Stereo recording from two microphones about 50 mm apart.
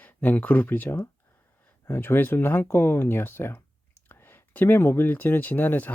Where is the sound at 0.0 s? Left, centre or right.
Left.